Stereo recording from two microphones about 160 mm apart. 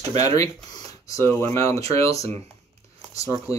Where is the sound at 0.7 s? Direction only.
20° left (ahead or behind).